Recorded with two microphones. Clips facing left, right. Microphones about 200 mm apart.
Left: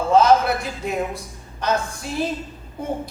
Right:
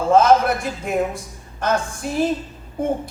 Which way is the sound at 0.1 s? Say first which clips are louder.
Right 1 dB; 50° right (ahead or behind).